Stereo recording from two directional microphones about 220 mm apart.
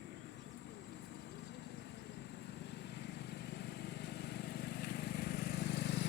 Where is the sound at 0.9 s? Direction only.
50° left (ahead or behind).